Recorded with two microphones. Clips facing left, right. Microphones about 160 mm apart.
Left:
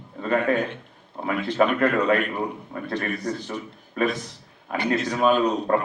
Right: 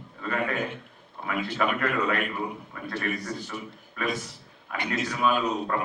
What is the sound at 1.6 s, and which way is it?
A man's voice, 35° left (ahead or behind).